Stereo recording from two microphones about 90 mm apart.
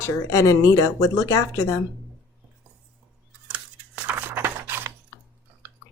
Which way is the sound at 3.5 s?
15° right (ahead or behind).